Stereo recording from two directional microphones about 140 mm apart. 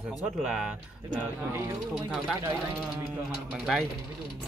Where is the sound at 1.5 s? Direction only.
20° right (ahead or behind).